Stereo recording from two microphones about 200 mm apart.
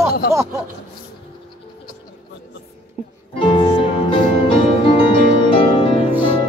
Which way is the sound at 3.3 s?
25° left (ahead or behind).